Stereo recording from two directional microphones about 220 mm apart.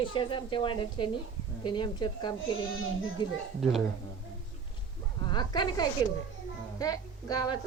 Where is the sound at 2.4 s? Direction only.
65° left (ahead or behind).